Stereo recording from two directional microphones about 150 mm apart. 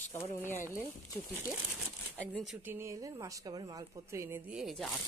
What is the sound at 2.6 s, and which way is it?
A woman's voice, 15° right (ahead or behind).